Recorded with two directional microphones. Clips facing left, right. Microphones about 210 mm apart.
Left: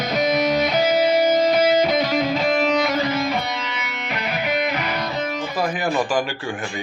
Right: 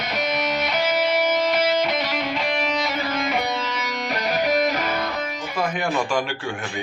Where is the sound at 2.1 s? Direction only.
40° left (ahead or behind).